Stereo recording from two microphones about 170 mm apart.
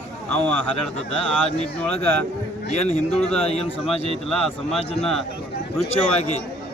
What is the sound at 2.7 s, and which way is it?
Speech, 40° left (ahead or behind).